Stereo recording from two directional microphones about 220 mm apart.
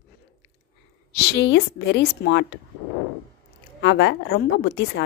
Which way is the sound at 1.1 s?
50° left (ahead or behind).